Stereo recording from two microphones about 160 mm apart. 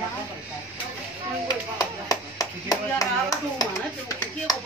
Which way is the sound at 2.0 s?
20° left (ahead or behind).